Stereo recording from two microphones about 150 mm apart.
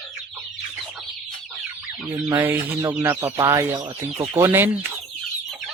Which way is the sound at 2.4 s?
15° right (ahead or behind).